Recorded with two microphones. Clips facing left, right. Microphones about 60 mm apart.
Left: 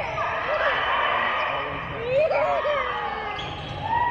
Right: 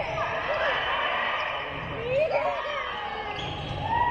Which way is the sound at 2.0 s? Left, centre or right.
Left.